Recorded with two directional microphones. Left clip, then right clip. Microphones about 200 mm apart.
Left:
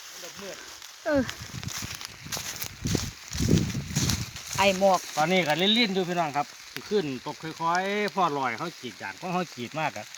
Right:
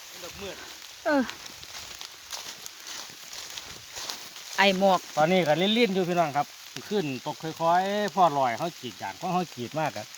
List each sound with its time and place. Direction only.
1.0 s speech: centre (ahead or behind)
3.5 s a sound: 55° left (ahead or behind)
4.5 s speech: 5° right (ahead or behind)
4.8 s speech: 15° right (ahead or behind)
5.2 s speech: 5° right (ahead or behind)